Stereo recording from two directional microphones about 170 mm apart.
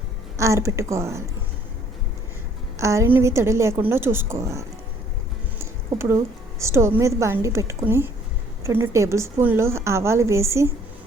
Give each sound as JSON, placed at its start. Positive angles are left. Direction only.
{"t": 0.3, "sound": "a woman's voice", "side_deg": -15}
{"t": 2.7, "sound": "a woman's voice", "side_deg": -15}